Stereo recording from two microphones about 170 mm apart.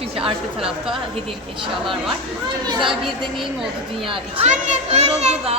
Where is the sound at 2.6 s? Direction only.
25° right (ahead or behind).